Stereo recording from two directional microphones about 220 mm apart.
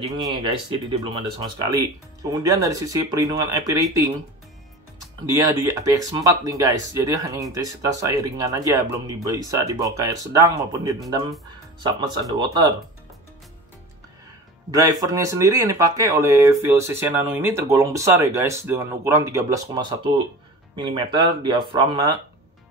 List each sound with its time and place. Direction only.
0.2 s speech: 20° right (ahead or behind)
5.3 s speech: 15° right (ahead or behind)
14.7 s speech: 15° right (ahead or behind)